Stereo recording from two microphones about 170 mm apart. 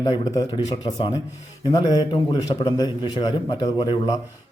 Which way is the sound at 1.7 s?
25° left (ahead or behind).